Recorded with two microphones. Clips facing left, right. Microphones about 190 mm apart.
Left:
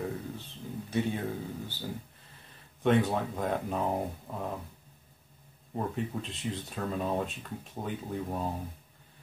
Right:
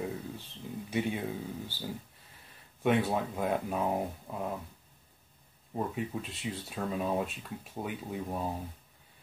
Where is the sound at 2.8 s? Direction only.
10° right (ahead or behind).